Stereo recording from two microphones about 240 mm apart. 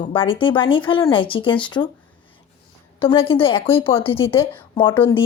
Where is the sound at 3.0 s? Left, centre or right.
Left.